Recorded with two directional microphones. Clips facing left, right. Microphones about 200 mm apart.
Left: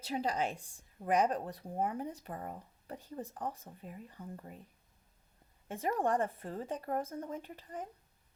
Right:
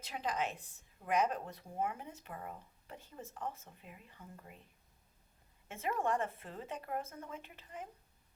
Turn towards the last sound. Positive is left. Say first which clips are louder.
# left 5 dB
turn(degrees=35)  # may be behind; listen again after turning